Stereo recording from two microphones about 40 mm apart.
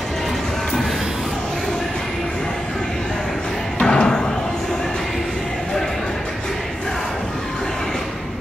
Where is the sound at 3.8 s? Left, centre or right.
Centre.